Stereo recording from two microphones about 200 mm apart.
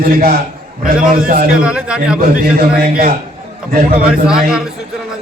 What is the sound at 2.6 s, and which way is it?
Speech, 50° right (ahead or behind).